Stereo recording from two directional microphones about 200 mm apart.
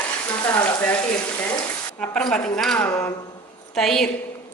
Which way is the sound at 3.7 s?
Centre (ahead or behind).